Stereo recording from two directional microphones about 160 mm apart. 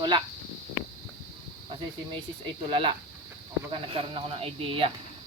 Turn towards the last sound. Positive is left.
turn(degrees=-35)  # may be behind; listen again after turning